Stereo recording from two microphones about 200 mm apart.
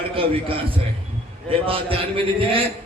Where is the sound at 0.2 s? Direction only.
25° right (ahead or behind).